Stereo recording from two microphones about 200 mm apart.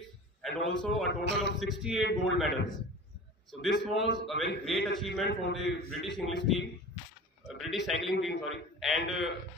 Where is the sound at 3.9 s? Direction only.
60° left (ahead or behind).